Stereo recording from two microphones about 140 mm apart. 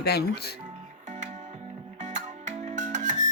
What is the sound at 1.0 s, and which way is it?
Music, 60° right (ahead or behind).